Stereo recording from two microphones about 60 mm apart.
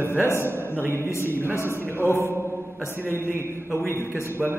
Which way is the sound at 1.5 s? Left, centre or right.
Left.